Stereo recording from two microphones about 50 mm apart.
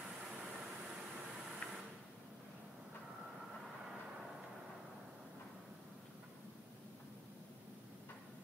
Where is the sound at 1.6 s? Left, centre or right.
Left.